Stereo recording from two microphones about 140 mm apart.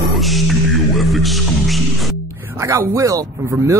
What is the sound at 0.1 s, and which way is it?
Music, centre (ahead or behind).